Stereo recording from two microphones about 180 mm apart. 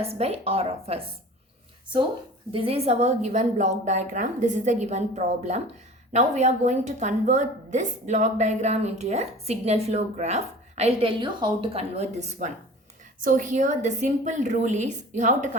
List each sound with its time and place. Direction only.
0.0 s a woman's voice: 35° right (ahead or behind)
2.5 s a woman's voice: 30° right (ahead or behind)